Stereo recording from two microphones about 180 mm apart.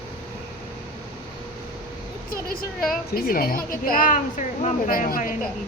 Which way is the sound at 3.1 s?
55° left (ahead or behind).